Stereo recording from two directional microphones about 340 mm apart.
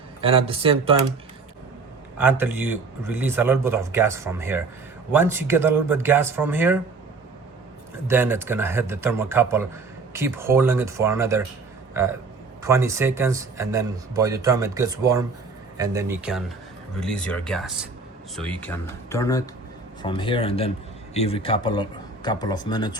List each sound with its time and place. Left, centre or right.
0.2 s speech: centre
2.1 s speech: centre
8.0 s a man's voice: centre